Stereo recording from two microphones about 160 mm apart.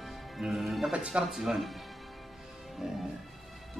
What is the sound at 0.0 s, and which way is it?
Music, centre (ahead or behind).